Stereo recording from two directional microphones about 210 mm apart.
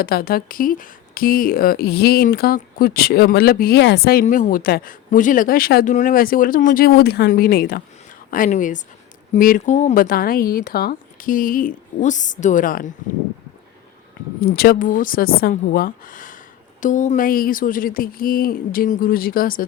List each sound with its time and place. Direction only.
0.0 s speech: 45° left (ahead or behind)
14.4 s speech: 50° left (ahead or behind)